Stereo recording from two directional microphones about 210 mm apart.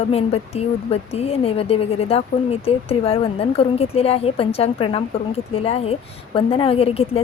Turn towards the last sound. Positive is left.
turn(degrees=25)  # may be behind; listen again after turning